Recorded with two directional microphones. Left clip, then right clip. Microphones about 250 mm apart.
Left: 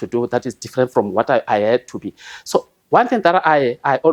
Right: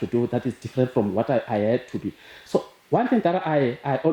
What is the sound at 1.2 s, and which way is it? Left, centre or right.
Speech, left.